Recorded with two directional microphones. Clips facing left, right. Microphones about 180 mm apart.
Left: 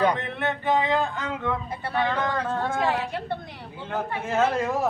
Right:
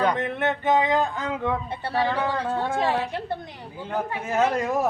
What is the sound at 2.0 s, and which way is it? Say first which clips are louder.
Speech: right 1 dB; 35° right (ahead or behind).